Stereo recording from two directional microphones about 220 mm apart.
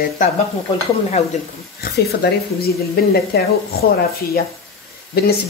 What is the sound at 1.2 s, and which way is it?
Speech, 30° left (ahead or behind).